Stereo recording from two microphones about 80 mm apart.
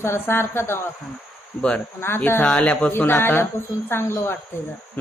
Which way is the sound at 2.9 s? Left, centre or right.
Left.